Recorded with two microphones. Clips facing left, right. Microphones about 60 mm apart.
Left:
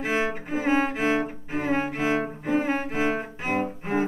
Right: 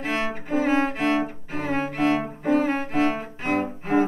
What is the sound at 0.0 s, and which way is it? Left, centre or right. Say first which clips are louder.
Music: left 1 dB; centre.